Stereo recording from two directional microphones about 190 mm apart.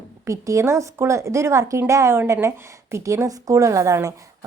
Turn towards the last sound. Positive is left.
turn(degrees=-15)  # may be behind; listen again after turning